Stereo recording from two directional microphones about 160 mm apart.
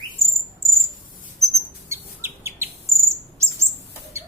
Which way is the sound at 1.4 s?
15° right (ahead or behind).